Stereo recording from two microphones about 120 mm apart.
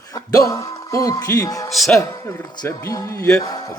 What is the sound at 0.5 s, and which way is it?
A man's voice, 25° left (ahead or behind).